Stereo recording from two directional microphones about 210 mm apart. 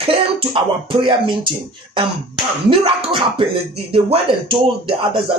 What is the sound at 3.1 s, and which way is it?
Speech, 25° right (ahead or behind).